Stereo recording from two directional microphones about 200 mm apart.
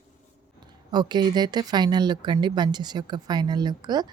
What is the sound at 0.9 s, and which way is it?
Speech, 20° right (ahead or behind).